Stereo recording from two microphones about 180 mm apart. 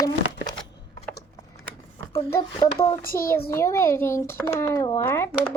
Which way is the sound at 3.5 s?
15° left (ahead or behind).